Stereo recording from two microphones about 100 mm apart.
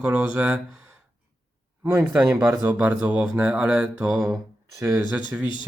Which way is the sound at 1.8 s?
25° right (ahead or behind).